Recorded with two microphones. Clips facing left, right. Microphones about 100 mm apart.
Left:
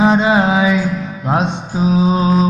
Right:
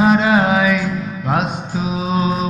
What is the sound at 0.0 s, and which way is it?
Music, 25° left (ahead or behind).